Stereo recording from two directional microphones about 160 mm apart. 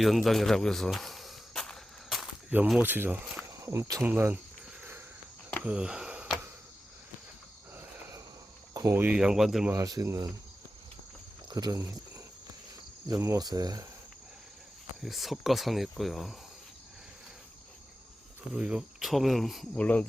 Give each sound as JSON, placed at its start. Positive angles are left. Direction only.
{"t": 0.0, "sound": "cricket", "side_deg": 0}
{"t": 3.6, "sound": "speech", "side_deg": -20}
{"t": 4.8, "sound": "a sound", "side_deg": -15}
{"t": 5.6, "sound": "speech", "side_deg": -5}
{"t": 8.7, "sound": "speech", "side_deg": -20}
{"t": 9.7, "sound": "speech", "side_deg": -20}
{"t": 11.4, "sound": "speech", "side_deg": -25}
{"t": 15.0, "sound": "speech", "side_deg": 0}
{"t": 18.5, "sound": "speech", "side_deg": -5}